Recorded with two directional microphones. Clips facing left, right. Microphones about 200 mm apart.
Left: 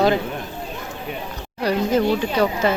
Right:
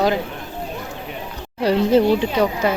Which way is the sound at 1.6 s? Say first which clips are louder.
Right 4 dB; 30° right (ahead or behind).